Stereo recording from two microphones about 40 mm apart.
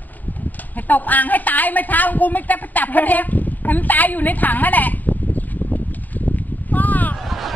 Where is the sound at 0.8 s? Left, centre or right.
Left.